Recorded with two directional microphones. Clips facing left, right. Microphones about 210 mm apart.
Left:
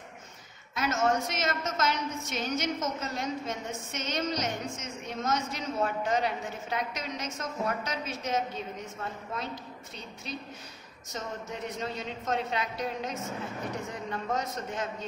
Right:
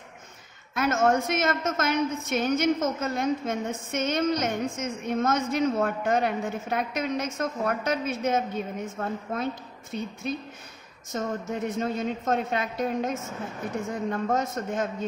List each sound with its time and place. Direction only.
0.7 s a woman's voice: 55° right (ahead or behind)